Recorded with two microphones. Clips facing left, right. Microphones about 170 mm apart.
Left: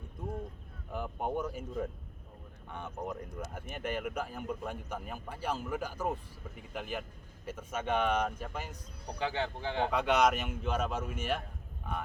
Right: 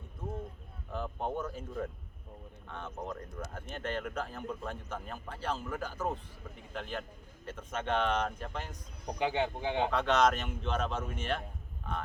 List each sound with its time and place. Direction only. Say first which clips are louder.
0.9 s a man's voice: left 1 dB; 10° left (ahead or behind)
2.6 s a man's voice: left 1 dB; 15° left (ahead or behind)
9.0 s speech: right 3 dB; 15° right (ahead or behind)
9.9 s a man's voice: left 1 dB; 10° left (ahead or behind)